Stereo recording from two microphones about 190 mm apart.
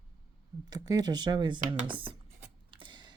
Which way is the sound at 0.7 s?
20° right (ahead or behind).